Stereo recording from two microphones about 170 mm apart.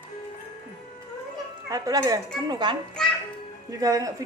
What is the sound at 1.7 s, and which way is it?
A woman's voice, 20° right (ahead or behind).